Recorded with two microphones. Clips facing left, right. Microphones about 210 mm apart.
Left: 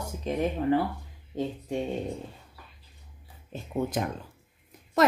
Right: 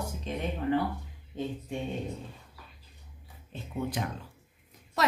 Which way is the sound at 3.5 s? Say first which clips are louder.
Left 4 dB; 45° left (ahead or behind).